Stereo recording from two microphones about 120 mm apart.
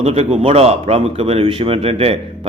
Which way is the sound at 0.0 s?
60° right (ahead or behind).